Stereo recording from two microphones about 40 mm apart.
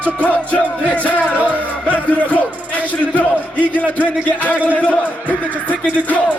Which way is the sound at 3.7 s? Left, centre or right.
Left.